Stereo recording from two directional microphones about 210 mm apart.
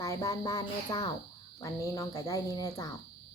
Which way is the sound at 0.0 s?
15° left (ahead or behind).